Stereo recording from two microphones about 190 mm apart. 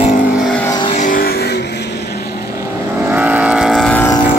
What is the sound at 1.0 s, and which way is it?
Music, 45° left (ahead or behind).